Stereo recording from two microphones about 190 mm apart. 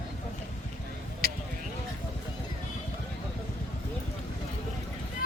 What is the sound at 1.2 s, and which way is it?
Basketball bounce, 55° right (ahead or behind).